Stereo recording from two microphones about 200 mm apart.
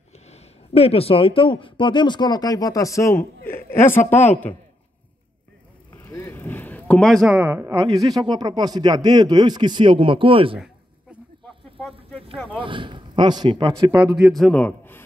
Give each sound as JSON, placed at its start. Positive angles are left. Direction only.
{"t": 0.3, "sound": "a man's voice", "side_deg": 30}
{"t": 5.9, "sound": "speech", "side_deg": 15}
{"t": 10.6, "sound": "a sound", "side_deg": 0}
{"t": 12.4, "sound": "speech", "side_deg": -25}
{"t": 14.1, "sound": "a man's voice", "side_deg": 0}